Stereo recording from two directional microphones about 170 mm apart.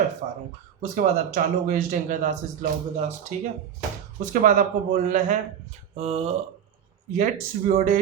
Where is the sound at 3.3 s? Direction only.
45° right (ahead or behind).